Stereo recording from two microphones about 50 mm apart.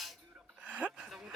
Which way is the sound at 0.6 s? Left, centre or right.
Right.